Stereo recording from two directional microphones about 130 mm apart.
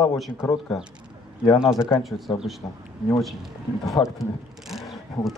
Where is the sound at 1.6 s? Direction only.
5° right (ahead or behind).